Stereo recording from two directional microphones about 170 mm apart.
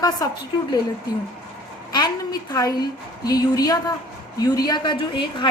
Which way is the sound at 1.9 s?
25° left (ahead or behind).